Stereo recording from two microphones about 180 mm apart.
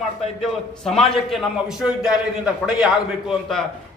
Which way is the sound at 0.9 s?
Centre (ahead or behind).